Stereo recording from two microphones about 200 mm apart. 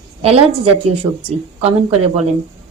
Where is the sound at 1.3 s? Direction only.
30° right (ahead or behind).